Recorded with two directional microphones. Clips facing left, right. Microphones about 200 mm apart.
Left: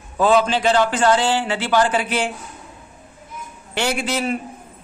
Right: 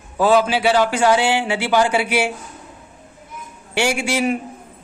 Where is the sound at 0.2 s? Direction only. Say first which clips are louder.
Right 1 dB; 10° right (ahead or behind).